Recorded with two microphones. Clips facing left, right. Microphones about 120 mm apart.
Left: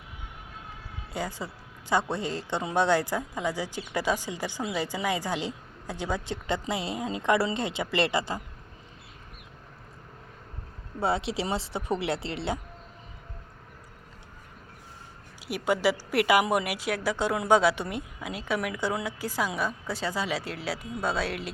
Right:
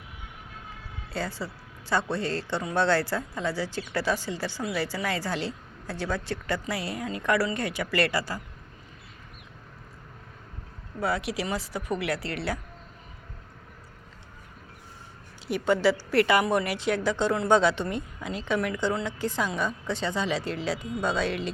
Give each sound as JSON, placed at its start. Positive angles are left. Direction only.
{"t": 1.1, "sound": "a woman's voice", "side_deg": 15}
{"t": 11.0, "sound": "speech", "side_deg": 25}
{"t": 15.4, "sound": "a woman's voice", "side_deg": 10}